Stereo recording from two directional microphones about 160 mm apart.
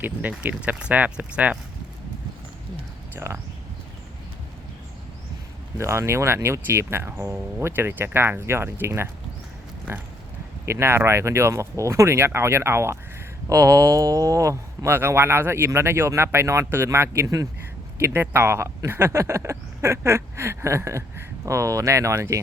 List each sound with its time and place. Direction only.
0.0 s speech: 10° right (ahead or behind)
3.2 s speech: 15° right (ahead or behind)
5.7 s speech: 15° right (ahead or behind)
10.7 s speech: 15° right (ahead or behind)